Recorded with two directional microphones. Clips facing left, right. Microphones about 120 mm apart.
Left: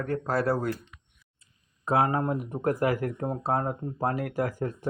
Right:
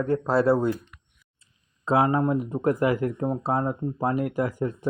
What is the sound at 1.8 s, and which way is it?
Speech, 25° right (ahead or behind).